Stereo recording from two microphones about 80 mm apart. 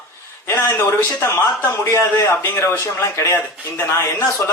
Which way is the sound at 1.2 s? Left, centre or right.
Left.